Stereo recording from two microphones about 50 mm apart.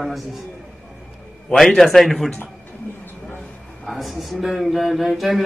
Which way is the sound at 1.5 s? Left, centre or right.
Centre.